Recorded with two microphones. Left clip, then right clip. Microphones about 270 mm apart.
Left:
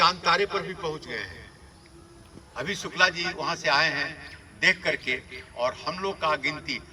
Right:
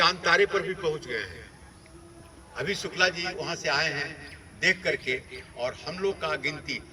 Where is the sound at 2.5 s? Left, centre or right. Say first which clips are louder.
Left 2 dB; left.